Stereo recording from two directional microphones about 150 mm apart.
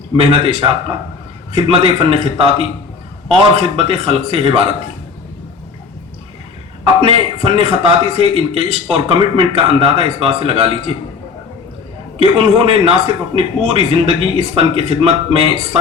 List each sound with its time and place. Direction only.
0.2 s a man's voice: 40° right (ahead or behind)
7.0 s a man's voice: 40° right (ahead or behind)
12.2 s a man's voice: 40° right (ahead or behind)